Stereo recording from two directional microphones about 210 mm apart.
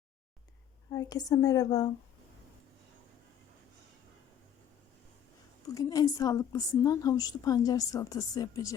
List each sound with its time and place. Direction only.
0.9 s a woman's voice: 20° left (ahead or behind)
5.7 s a woman's voice: 15° left (ahead or behind)